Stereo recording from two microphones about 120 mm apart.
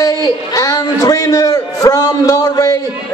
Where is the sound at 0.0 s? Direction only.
35° left (ahead or behind).